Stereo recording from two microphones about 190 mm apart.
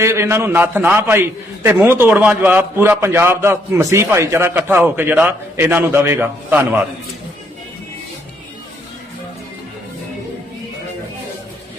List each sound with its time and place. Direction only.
0.0 s a man's voice: 15° right (ahead or behind)